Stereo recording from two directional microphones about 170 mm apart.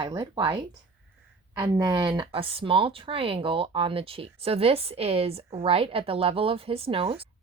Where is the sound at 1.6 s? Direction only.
25° right (ahead or behind).